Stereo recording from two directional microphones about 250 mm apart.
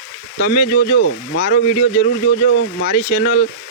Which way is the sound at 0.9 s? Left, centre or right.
Left.